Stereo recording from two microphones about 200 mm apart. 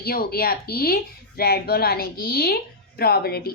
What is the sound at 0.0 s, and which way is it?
A woman's voice, 50° left (ahead or behind).